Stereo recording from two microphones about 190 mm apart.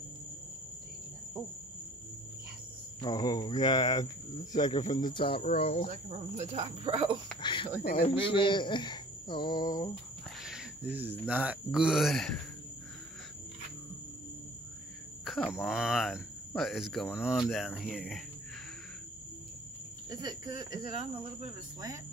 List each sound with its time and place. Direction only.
3.0 s speech: 20° left (ahead or behind)
5.9 s speech: 35° right (ahead or behind)
7.4 s speech: 25° left (ahead or behind)
10.4 s speech: 5° right (ahead or behind)
15.2 s speech: centre (ahead or behind)
20.1 s speech: 20° right (ahead or behind)